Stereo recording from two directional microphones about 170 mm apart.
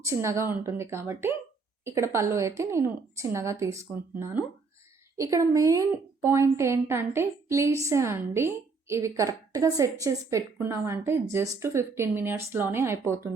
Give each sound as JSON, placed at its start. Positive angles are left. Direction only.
{"t": 0.0, "sound": "a woman's voice", "side_deg": -15}